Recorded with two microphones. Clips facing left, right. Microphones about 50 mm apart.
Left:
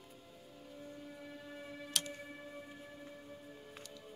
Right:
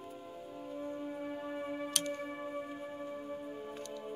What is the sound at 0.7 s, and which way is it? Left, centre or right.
Music, right.